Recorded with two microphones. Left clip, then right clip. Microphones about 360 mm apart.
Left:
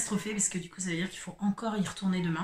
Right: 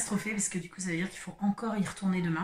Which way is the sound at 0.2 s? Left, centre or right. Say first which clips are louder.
Left 1 dB; centre.